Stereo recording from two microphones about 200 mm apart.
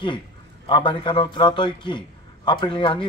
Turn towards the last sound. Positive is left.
turn(degrees=25)  # may be behind; listen again after turning